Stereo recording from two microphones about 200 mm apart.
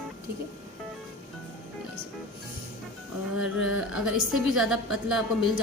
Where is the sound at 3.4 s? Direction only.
70° left (ahead or behind).